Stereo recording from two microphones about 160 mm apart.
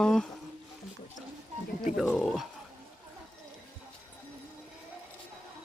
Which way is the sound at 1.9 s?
Centre (ahead or behind).